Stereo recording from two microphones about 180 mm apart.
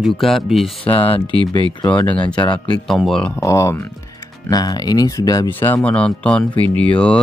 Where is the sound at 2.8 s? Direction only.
Centre (ahead or behind).